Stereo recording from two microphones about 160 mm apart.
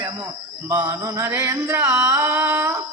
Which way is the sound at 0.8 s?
20° right (ahead or behind).